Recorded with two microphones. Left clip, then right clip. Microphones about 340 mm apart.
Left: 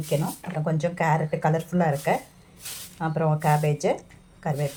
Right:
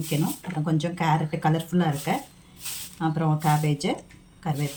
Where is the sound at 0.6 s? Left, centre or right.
Centre.